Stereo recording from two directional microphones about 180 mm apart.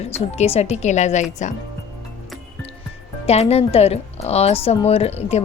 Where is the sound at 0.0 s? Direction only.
35° left (ahead or behind).